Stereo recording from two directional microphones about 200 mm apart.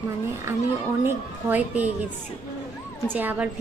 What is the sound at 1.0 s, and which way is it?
Speech, 10° right (ahead or behind).